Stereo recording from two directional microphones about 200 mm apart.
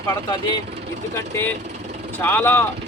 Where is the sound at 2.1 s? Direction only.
10° left (ahead or behind).